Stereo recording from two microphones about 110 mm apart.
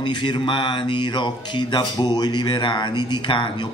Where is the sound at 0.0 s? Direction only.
45° left (ahead or behind).